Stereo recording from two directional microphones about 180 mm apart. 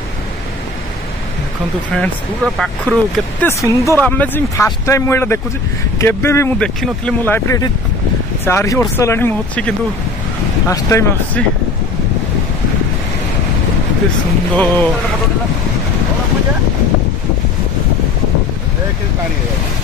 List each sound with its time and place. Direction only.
2.0 s speech: 5° left (ahead or behind)
3.4 s speech: 15° left (ahead or behind)
14.5 s speech: 10° left (ahead or behind)